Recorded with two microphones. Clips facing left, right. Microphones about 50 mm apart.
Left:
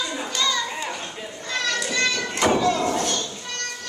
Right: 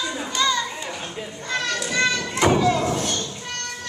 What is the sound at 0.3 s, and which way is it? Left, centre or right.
Children playing, centre.